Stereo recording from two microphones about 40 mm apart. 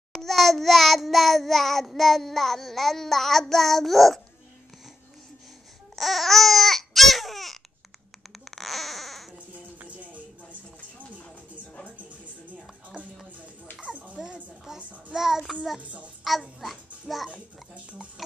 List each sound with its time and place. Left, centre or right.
0.1 s child singing: centre
5.9 s babbling: centre
8.5 s baby cry: centre
9.5 s music: right
13.0 s music: right
14.8 s a child's voice: right
15.1 s a child's voice: centre
15.8 s a child's voice: right
16.3 s child singing: centre
17.3 s a child's voice: right